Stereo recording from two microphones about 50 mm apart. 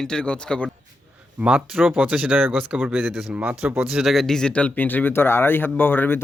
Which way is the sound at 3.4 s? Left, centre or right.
Right.